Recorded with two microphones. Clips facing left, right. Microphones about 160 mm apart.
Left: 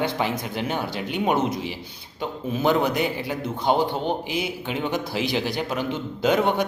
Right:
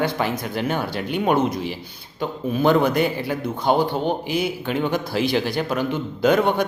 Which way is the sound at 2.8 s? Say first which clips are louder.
Right 4 dB; 50° right (ahead or behind).